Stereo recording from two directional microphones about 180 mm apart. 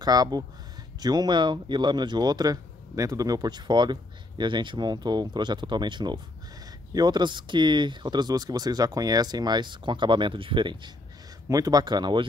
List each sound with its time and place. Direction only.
0.0 s speech: 20° right (ahead or behind)